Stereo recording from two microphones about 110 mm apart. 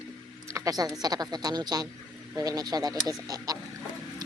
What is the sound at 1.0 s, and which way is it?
Speech, 35° right (ahead or behind).